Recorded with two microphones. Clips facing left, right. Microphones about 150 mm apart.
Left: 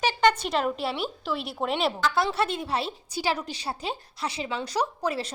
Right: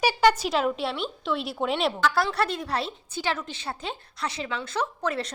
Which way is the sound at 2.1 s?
20° left (ahead or behind).